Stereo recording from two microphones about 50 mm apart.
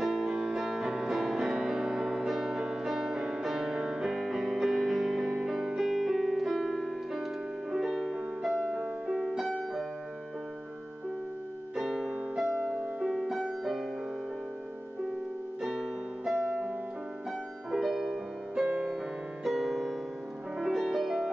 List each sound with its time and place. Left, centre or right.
0.0 s music: centre
3.2 s music: centre
11.7 s music: centre
16.3 s music: centre